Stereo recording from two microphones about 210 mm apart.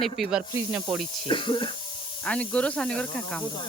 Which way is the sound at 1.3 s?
25° left (ahead or behind).